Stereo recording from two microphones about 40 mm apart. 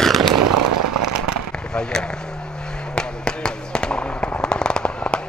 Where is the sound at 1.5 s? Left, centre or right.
Centre.